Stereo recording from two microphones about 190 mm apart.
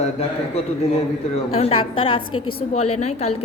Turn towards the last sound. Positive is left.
turn(degrees=35)  # may be behind; listen again after turning